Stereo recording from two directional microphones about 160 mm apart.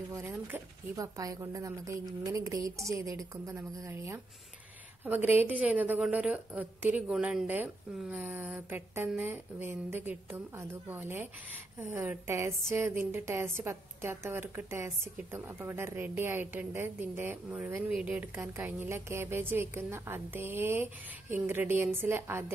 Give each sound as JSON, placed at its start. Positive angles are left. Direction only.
{"t": 0.1, "sound": "a woman's voice", "side_deg": -15}